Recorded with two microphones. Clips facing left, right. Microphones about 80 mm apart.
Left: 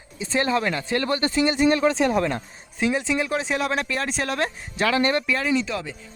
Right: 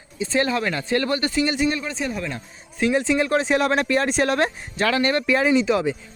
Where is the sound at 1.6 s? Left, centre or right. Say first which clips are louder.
Left 6 dB; left.